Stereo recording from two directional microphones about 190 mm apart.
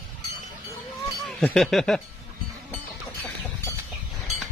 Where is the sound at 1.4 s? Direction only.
5° left (ahead or behind).